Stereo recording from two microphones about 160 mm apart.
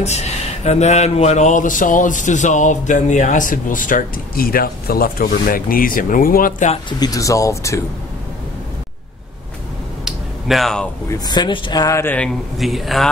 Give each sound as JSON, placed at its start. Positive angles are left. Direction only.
{"t": 0.7, "sound": "a man's voice", "side_deg": 45}
{"t": 7.0, "sound": "speech", "side_deg": 20}
{"t": 10.0, "sound": "a sound", "side_deg": 0}
{"t": 11.1, "sound": "speech", "side_deg": 25}
{"t": 12.5, "sound": "speech", "side_deg": 0}